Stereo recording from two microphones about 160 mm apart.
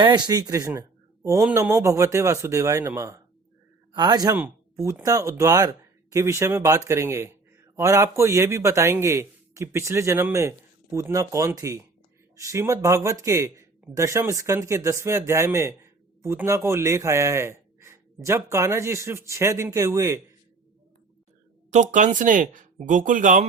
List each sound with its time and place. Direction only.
0.0 s speech: 25° right (ahead or behind)
4.4 s a man's voice: 15° right (ahead or behind)
21.7 s speech: 50° right (ahead or behind)